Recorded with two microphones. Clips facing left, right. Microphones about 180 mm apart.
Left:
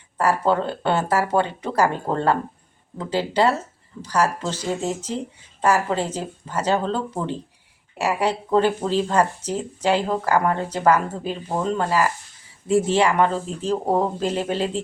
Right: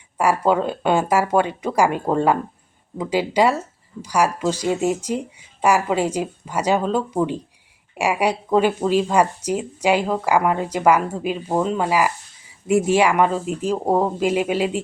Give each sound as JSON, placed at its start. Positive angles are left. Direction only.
{"t": 0.2, "sound": "speech", "side_deg": -10}